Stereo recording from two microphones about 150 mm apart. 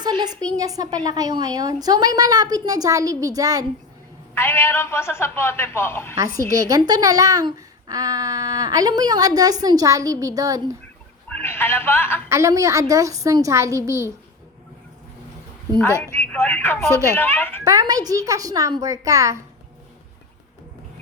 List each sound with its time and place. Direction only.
0.0 s speech: 30° right (ahead or behind)
4.4 s a man's voice: 15° left (ahead or behind)
6.2 s a woman's voice: 75° left (ahead or behind)
6.5 s speech: 25° right (ahead or behind)
11.3 s speech: 15° left (ahead or behind)
12.3 s speech: 20° right (ahead or behind)
16.2 s a man's voice: 10° left (ahead or behind)
16.9 s speech: 20° right (ahead or behind)
17.2 s a man's voice: 15° left (ahead or behind)
17.7 s speech: 25° right (ahead or behind)